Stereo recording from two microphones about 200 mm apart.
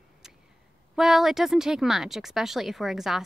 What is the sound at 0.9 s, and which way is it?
Speech, centre (ahead or behind).